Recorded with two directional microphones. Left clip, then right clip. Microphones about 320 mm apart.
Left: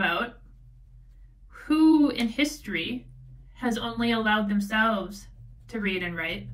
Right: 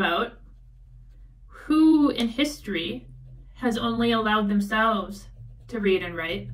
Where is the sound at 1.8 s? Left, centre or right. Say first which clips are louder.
Right 1 dB; centre.